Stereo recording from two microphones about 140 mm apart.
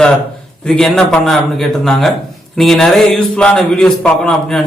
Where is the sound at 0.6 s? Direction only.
5° left (ahead or behind).